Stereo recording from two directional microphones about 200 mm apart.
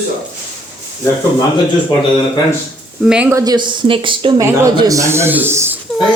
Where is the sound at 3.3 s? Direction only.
20° right (ahead or behind).